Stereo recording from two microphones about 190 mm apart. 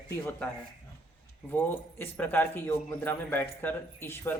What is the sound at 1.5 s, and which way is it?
Speech, 10° left (ahead or behind).